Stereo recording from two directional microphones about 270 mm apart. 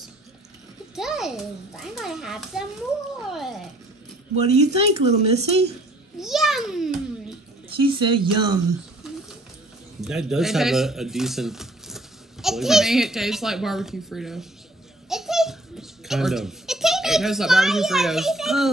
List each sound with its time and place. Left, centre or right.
0.9 s a child's voice: centre
4.6 s speech: right
6.1 s a child's voice: centre
7.7 s speech: centre
9.9 s speech: centre
15.0 s baby laughter: centre